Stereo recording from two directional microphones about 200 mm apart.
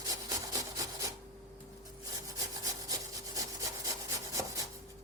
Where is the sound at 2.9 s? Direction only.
15° right (ahead or behind).